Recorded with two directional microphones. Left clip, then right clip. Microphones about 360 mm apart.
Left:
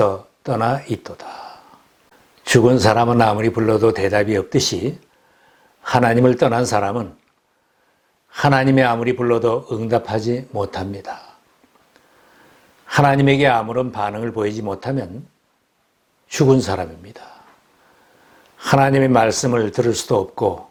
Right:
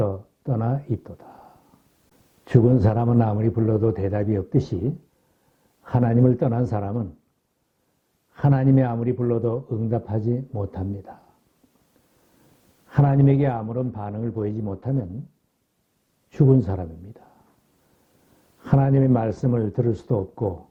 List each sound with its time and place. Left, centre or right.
0.0 s a man's voice: centre
8.3 s a man's voice: centre
12.9 s a man's voice: centre
16.6 s speech: centre
18.6 s a man's voice: centre
20.4 s speech: left